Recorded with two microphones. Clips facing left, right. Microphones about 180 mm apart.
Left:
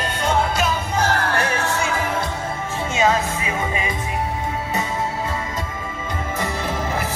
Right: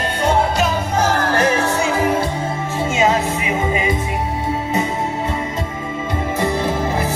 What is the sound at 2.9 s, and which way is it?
Music, 25° right (ahead or behind).